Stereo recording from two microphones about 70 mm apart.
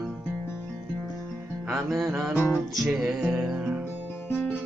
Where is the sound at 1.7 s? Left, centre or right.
Centre.